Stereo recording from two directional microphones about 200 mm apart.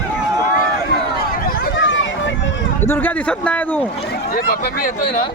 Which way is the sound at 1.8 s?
70° left (ahead or behind).